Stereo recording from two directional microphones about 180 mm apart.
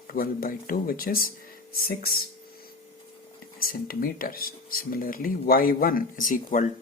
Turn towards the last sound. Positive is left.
turn(degrees=50)  # may be behind; listen again after turning